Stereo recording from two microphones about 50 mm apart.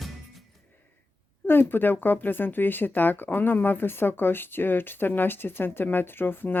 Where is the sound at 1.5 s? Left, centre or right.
Left.